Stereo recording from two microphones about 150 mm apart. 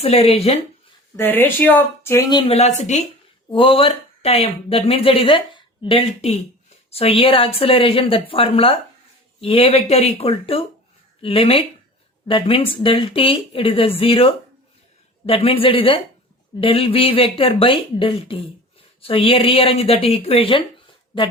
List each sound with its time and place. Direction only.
0.0 s speech: 40° left (ahead or behind)
1.1 s speech: 15° left (ahead or behind)
2.3 s speech: 40° left (ahead or behind)
3.5 s speech: 35° left (ahead or behind)
15.3 s speech: 40° left (ahead or behind)